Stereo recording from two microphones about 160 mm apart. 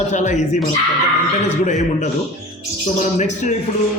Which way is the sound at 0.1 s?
50° left (ahead or behind).